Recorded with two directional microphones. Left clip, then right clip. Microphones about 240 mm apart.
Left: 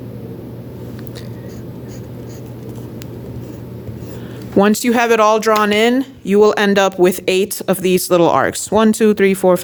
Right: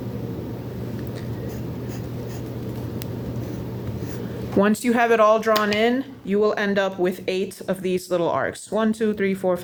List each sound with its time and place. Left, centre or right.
4.5 s speech: left